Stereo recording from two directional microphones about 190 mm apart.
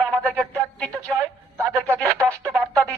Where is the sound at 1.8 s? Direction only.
15° right (ahead or behind).